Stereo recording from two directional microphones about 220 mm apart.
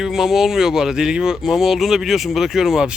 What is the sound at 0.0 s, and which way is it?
Speech, centre (ahead or behind).